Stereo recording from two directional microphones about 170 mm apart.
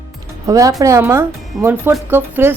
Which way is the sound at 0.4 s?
20° right (ahead or behind).